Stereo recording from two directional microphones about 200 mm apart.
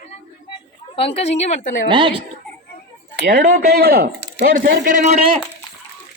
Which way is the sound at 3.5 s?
50° right (ahead or behind).